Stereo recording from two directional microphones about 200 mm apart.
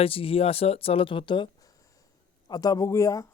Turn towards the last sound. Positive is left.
turn(degrees=15)  # may be behind; listen again after turning